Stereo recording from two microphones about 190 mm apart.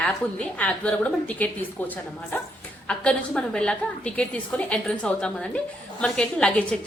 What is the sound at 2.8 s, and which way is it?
A woman's voice, 5° left (ahead or behind).